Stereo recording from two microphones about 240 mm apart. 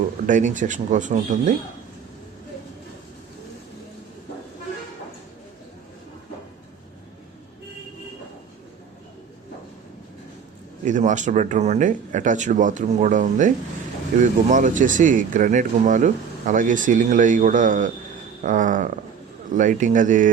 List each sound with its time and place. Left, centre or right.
0.3 s speech: right
10.8 s speech: right